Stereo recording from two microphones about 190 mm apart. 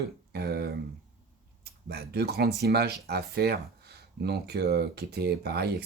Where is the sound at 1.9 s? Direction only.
55° right (ahead or behind).